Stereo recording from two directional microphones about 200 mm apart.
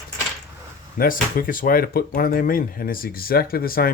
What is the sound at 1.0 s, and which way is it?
Speech, 45° left (ahead or behind).